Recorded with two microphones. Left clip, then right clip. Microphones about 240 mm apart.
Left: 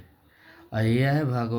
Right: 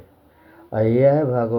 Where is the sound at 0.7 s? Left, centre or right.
Left.